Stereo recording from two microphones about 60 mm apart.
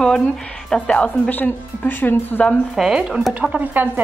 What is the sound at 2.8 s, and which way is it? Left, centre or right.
Speech, centre.